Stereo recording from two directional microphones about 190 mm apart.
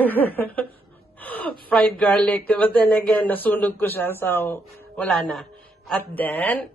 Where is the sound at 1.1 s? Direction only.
10° left (ahead or behind).